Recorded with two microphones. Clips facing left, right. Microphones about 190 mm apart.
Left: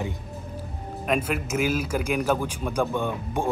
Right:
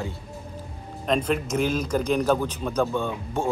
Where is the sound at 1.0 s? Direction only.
5° left (ahead or behind).